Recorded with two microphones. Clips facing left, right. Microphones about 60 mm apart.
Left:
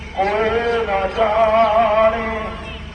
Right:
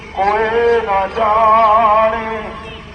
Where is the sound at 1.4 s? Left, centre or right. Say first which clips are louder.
Right 7 dB; right.